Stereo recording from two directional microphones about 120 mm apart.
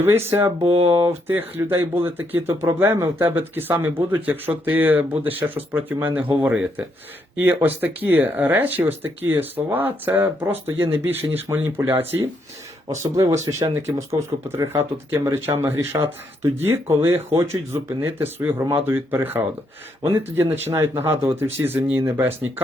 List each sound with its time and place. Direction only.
0.0 s speech: 20° right (ahead or behind)
0.6 s speech: 55° right (ahead or behind)
0.9 s speech: 20° right (ahead or behind)